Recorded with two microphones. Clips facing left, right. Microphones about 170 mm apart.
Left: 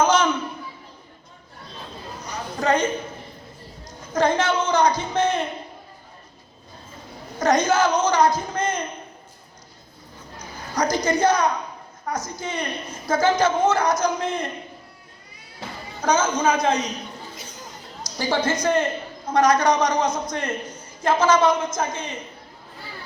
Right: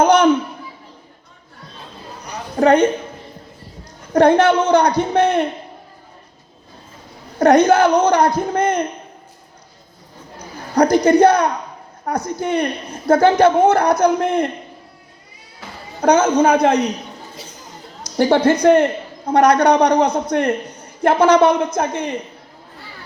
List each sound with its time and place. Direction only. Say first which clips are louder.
0.0 s a sound: right 6 dB; 60° right (ahead or behind)
2.6 s a woman's voice: right 9 dB; 60° right (ahead or behind)
4.1 s a woman's voice: right 9 dB; 60° right (ahead or behind)
7.3 s a woman's voice: right 8 dB; 60° right (ahead or behind)
10.3 s a woman's voice: right 10 dB; 60° right (ahead or behind)
16.0 s a woman's voice: right 7 dB; 60° right (ahead or behind)
18.0 s a woman's voice: right 9 dB; 60° right (ahead or behind)